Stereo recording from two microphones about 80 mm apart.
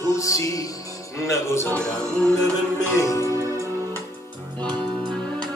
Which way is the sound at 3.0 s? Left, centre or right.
Left.